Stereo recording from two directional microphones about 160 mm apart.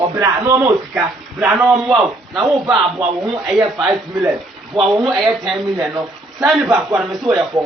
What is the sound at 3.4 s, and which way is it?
Speech, centre (ahead or behind).